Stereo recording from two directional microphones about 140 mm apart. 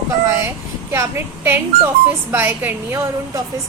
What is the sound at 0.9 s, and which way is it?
A woman's voice, 20° right (ahead or behind).